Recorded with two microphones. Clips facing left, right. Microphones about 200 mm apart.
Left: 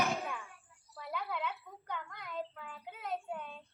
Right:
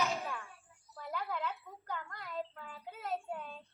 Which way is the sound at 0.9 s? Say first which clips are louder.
Even; centre (ahead or behind).